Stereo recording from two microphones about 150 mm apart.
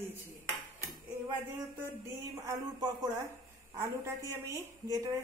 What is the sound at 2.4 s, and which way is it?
A woman's voice, 25° right (ahead or behind).